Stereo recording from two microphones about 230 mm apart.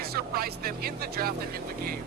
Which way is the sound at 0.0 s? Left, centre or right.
Right.